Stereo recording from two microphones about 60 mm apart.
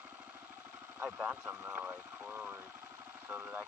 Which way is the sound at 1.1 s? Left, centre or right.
Centre.